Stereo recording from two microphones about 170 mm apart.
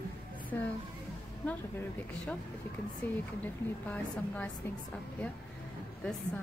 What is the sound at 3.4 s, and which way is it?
A woman's voice, 10° left (ahead or behind).